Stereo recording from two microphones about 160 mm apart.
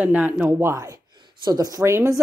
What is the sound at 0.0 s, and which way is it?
Speech, 10° right (ahead or behind).